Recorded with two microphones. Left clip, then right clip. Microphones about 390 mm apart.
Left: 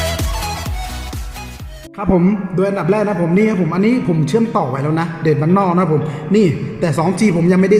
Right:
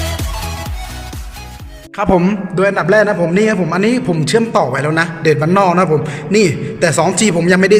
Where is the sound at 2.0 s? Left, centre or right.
Right.